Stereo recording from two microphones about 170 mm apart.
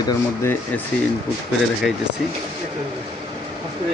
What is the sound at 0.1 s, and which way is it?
Speech, 15° left (ahead or behind).